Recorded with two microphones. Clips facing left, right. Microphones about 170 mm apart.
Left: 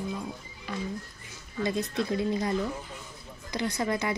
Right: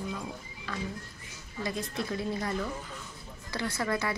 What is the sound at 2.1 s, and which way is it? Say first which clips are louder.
A woman's voice: left 4 dB; 20° left (ahead or behind).